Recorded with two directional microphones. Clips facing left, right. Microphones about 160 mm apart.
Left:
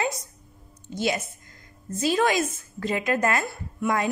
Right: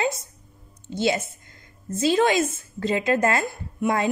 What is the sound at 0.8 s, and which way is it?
A woman's voice, 25° right (ahead or behind).